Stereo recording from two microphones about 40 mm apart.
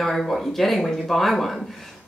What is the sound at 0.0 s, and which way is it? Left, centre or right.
Speech, centre.